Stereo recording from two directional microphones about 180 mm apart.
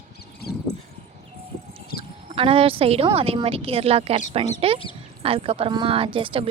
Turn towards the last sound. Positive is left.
turn(degrees=-30)  # may be behind; listen again after turning